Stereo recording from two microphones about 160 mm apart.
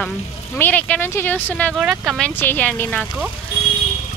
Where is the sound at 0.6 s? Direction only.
10° left (ahead or behind).